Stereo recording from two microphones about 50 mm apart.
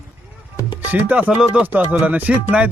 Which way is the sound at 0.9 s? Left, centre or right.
Right.